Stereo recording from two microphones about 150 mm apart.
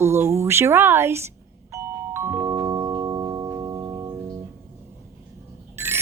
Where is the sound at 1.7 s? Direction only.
15° right (ahead or behind).